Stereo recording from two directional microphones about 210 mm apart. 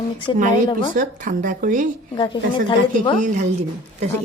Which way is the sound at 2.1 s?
20° left (ahead or behind).